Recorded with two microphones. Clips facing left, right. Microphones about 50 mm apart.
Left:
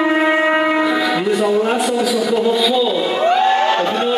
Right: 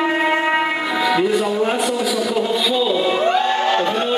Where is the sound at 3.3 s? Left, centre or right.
Centre.